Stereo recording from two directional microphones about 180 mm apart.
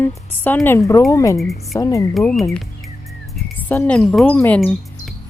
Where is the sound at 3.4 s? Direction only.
5° left (ahead or behind).